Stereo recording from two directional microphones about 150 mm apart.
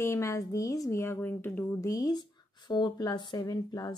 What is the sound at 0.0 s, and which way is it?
Speech, 20° left (ahead or behind).